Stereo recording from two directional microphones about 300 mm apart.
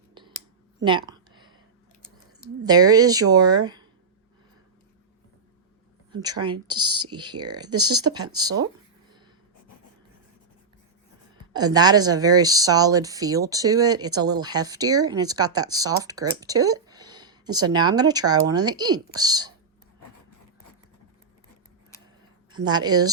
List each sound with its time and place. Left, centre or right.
0.1 s a sound: centre
2.6 s speech: centre
6.1 s speech: centre
7.8 s speech: right
8.0 s speech: centre
11.5 s speech: centre
22.5 s speech: centre